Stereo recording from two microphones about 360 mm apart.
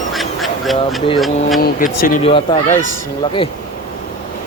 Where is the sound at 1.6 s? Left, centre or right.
Left.